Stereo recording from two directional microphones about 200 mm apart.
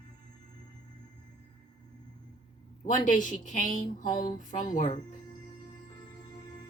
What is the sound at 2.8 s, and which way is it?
Speech, 40° left (ahead or behind).